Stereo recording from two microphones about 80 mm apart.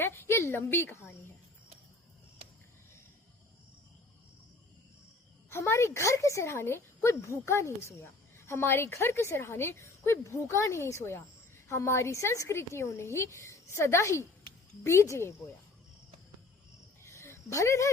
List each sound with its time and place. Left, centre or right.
0.0 s a woman's voice: left
5.5 s a woman's voice: left
17.0 s a sound: left